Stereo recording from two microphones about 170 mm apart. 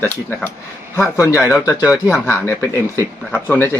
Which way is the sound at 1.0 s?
20° left (ahead or behind).